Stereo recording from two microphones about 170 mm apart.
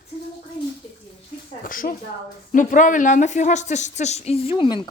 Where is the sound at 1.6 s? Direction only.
55° left (ahead or behind).